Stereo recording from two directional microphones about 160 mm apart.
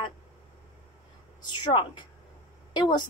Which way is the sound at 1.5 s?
30° left (ahead or behind).